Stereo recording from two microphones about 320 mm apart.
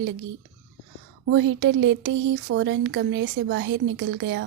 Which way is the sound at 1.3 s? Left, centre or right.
Right.